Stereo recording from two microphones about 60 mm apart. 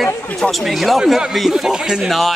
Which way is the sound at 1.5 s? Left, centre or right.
Centre.